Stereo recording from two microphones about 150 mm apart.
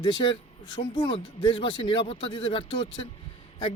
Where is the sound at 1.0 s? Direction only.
35° left (ahead or behind).